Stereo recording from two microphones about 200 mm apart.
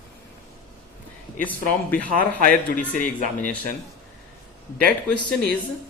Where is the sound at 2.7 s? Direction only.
40° left (ahead or behind).